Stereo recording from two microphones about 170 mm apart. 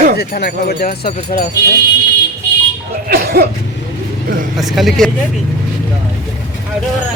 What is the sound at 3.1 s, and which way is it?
Cough, 65° right (ahead or behind).